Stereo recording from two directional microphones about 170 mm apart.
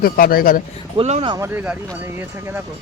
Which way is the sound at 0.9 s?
40° right (ahead or behind).